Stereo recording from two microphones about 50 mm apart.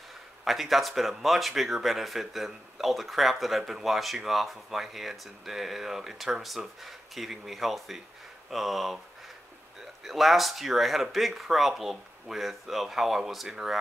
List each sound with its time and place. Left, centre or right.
0.5 s speech: centre
10.0 s speech: centre